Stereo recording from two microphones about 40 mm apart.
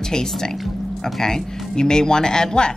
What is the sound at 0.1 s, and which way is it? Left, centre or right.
A woman's voice, centre.